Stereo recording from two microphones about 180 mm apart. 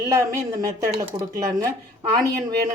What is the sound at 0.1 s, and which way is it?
A woman's voice, 15° right (ahead or behind).